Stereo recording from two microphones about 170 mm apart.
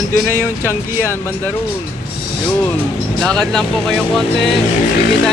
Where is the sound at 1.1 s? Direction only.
15° left (ahead or behind).